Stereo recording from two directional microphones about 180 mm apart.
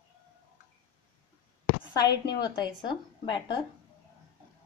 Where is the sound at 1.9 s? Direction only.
20° left (ahead or behind).